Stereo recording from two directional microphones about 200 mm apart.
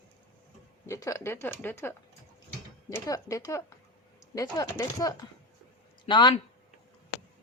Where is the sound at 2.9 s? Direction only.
15° left (ahead or behind).